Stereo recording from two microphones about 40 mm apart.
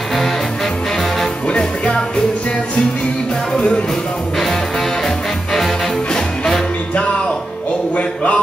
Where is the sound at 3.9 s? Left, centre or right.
Centre.